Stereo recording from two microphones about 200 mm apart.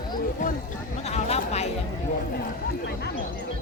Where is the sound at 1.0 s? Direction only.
30° left (ahead or behind).